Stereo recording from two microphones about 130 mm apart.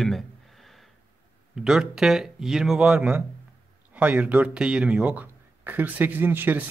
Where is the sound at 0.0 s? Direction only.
Centre (ahead or behind).